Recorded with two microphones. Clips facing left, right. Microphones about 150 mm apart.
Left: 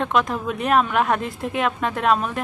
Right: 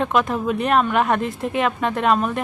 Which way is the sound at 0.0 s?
Centre (ahead or behind).